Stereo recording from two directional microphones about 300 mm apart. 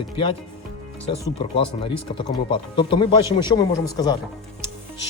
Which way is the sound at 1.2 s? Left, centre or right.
Centre.